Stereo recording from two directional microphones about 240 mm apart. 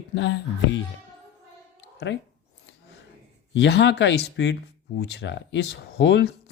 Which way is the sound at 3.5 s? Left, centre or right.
Left.